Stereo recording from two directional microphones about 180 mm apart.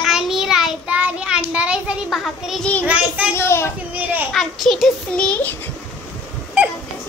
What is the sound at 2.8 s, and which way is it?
Child singing, 5° right (ahead or behind).